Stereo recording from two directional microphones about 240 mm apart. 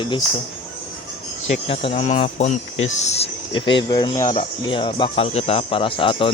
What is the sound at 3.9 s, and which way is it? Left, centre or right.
Speech, centre.